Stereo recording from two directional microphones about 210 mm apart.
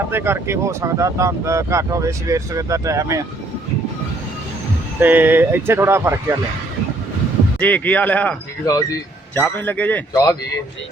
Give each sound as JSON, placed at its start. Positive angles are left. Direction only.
{"t": 0.1, "sound": "speech", "side_deg": -10}
{"t": 4.9, "sound": "speech", "side_deg": -10}
{"t": 7.6, "sound": "speech", "side_deg": 5}